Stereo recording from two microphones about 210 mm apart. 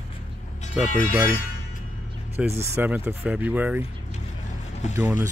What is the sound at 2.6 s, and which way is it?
Speech, 10° right (ahead or behind).